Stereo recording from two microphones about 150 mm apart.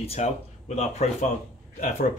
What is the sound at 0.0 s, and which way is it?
Speech, 45° left (ahead or behind).